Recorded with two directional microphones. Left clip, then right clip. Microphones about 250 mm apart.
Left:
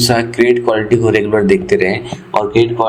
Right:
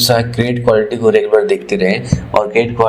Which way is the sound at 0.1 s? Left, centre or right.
Centre.